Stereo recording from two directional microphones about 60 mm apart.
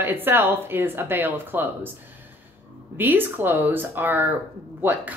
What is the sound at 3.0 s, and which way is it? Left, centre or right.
Speech, right.